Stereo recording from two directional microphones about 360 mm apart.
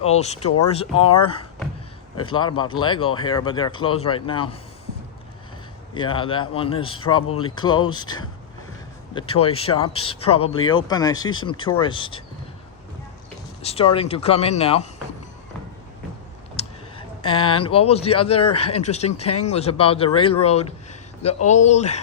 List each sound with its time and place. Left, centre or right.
0.1 s speech: centre
5.9 s speech: centre
13.6 s speech: centre
16.6 s a sound: centre
17.2 s speech: centre
19.2 s speech: left
19.5 s speech: centre